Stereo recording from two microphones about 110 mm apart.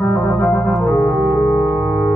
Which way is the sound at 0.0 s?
20° left (ahead or behind).